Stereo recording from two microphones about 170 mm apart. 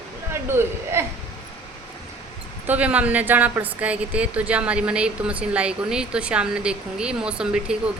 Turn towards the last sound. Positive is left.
turn(degrees=-5)  # may be behind; listen again after turning